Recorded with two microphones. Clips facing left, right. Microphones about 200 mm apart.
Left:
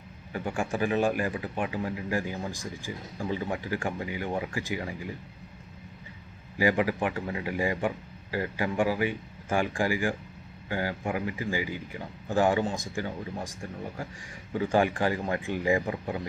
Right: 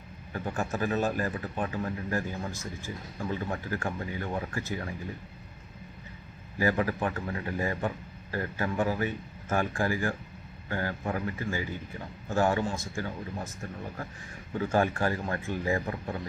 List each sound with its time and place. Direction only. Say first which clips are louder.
0.5 s speech: left 2 dB; 15° left (ahead or behind)
6.6 s speech: left 2 dB; 15° left (ahead or behind)